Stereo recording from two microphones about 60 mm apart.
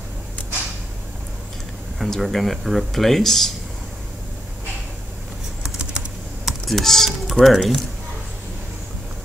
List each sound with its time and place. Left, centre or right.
2.0 s speech: centre
5.6 s typing: centre
6.4 s computer keyboard: centre
7.1 s speech: centre